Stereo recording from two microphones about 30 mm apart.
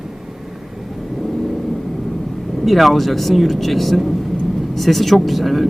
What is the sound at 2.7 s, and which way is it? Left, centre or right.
Speech, centre.